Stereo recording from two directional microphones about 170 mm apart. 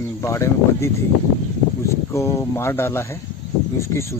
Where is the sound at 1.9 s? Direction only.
15° left (ahead or behind).